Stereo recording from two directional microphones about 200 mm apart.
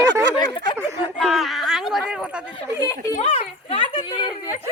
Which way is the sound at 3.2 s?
30° left (ahead or behind).